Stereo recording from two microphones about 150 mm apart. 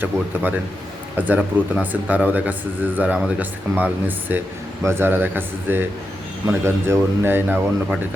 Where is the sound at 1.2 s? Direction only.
10° right (ahead or behind).